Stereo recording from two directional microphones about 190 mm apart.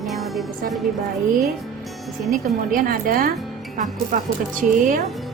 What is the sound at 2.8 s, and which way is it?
Speech, 50° right (ahead or behind).